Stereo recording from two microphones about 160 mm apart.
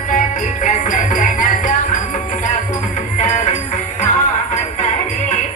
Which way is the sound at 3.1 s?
50° left (ahead or behind).